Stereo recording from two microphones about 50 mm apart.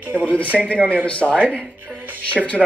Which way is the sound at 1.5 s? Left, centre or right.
Left.